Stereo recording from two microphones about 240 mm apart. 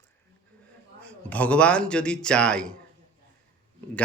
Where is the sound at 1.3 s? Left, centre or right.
Centre.